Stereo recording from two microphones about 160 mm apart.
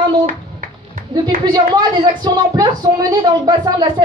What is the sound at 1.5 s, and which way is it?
A woman's voice, 30° right (ahead or behind).